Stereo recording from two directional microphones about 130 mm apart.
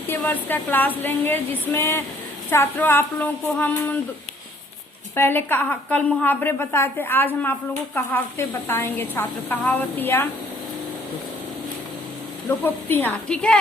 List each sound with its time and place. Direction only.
0.1 s a woman's voice: 15° left (ahead or behind)
5.1 s a woman's voice: 15° left (ahead or behind)
12.6 s a woman's voice: 15° left (ahead or behind)